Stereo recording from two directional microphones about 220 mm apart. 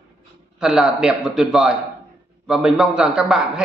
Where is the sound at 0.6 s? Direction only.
Centre (ahead or behind).